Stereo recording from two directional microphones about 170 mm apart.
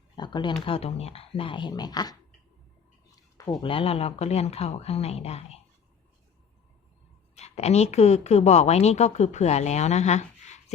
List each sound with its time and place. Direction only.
0.2 s speech: 25° left (ahead or behind)
3.6 s a woman's voice: 30° left (ahead or behind)
7.3 s a woman's voice: 40° left (ahead or behind)